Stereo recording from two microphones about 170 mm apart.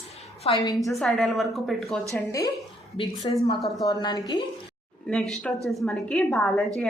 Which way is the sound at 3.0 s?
30° left (ahead or behind).